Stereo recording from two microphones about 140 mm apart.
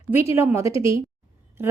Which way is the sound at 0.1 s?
20° right (ahead or behind).